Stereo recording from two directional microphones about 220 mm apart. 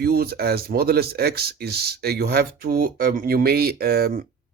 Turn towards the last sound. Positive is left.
turn(degrees=-45)  # may be behind; listen again after turning